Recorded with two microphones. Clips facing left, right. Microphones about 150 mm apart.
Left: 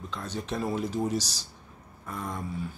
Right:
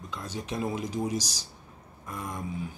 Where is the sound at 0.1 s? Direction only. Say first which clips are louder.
Left 1 dB; 10° right (ahead or behind).